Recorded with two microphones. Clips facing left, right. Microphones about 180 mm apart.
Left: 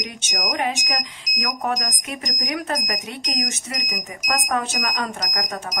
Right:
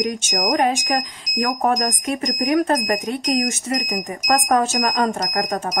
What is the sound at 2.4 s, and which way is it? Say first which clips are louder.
Speech: right 9 dB; 50° right (ahead or behind).